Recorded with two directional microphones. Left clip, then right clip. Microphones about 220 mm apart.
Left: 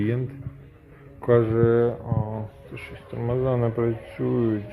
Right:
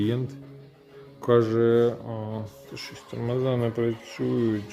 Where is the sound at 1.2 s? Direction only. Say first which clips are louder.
Left 1 dB; 15° right (ahead or behind).